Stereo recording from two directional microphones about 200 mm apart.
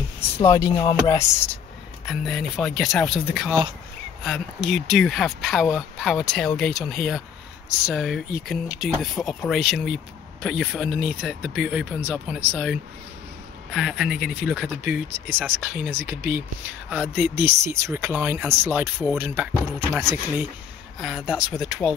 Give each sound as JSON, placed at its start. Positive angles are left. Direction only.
{"t": 0.4, "sound": "chopping", "side_deg": 15}
{"t": 2.0, "sound": "speech", "side_deg": 0}
{"t": 4.2, "sound": "speech", "side_deg": 0}
{"t": 21.0, "sound": "speech", "side_deg": 0}